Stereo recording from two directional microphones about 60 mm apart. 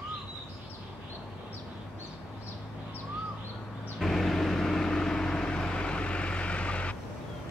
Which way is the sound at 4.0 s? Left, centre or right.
Centre.